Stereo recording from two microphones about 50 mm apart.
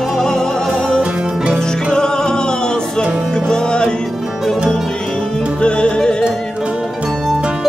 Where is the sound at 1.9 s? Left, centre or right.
Centre.